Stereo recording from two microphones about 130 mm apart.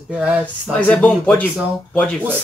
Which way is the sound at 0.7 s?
10° left (ahead or behind).